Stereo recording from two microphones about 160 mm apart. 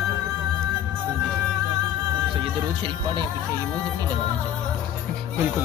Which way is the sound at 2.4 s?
30° right (ahead or behind).